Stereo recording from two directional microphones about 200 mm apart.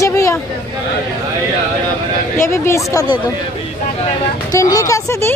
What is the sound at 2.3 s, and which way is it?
Speech, 10° left (ahead or behind).